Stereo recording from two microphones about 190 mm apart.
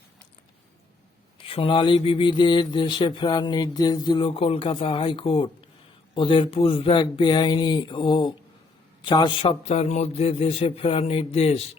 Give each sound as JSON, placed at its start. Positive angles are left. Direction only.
{"t": 1.4, "sound": "a man's voice", "side_deg": 30}